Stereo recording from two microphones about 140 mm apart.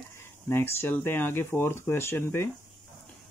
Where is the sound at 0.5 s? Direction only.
15° left (ahead or behind).